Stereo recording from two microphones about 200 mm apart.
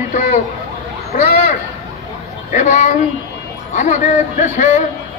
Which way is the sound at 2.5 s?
35° left (ahead or behind).